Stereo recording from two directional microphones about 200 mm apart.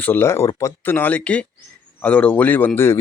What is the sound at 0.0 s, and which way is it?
Speech, 10° left (ahead or behind).